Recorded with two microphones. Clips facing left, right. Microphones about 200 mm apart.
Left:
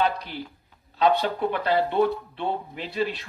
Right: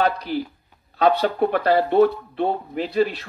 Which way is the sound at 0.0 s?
40° right (ahead or behind).